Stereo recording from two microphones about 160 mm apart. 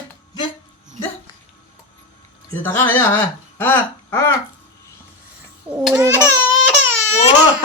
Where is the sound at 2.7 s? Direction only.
15° left (ahead or behind).